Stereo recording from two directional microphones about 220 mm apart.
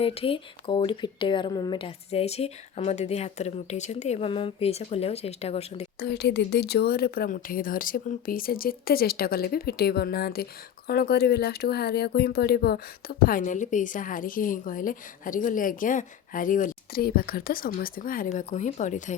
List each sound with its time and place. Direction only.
0.0 s speech: 25° left (ahead or behind)
6.0 s speech: 50° left (ahead or behind); by 19.1 s 35° left (ahead or behind)